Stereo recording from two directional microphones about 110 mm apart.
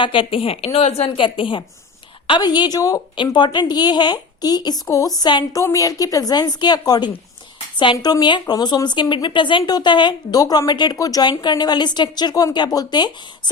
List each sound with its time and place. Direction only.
0.0 s a woman's voice: 50° left (ahead or behind)
5.5 s speech: 30° left (ahead or behind)